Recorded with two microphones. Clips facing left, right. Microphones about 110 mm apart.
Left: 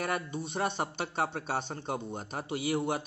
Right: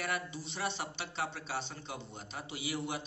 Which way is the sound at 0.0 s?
50° left (ahead or behind).